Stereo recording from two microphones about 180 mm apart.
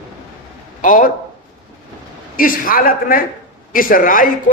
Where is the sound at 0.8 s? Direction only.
50° left (ahead or behind).